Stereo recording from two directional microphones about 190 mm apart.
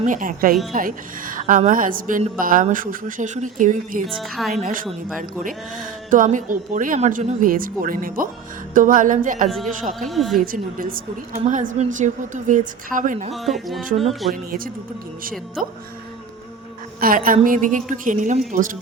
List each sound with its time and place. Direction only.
0.0 s speech: 45° right (ahead or behind)
4.0 s a woman's voice: centre (ahead or behind)
4.5 s speech: 45° right (ahead or behind)
10.1 s a woman's voice: centre (ahead or behind)
10.4 s a woman's voice: 50° right (ahead or behind)
13.3 s a woman's voice: centre (ahead or behind)
17.0 s speech: 50° right (ahead or behind)